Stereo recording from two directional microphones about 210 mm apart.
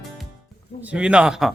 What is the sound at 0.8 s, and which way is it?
Speech, 5° right (ahead or behind).